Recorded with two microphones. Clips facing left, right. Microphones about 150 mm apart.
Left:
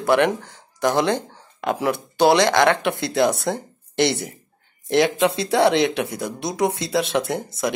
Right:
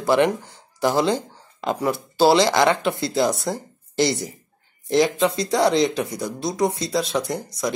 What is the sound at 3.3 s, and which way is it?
Speech, 60° left (ahead or behind).